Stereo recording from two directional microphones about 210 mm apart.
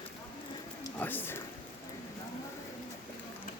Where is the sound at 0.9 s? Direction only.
10° left (ahead or behind).